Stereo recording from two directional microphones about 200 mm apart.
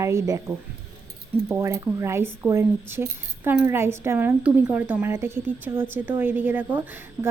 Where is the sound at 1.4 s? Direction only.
10° right (ahead or behind).